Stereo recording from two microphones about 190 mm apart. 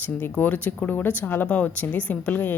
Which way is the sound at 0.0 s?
10° left (ahead or behind).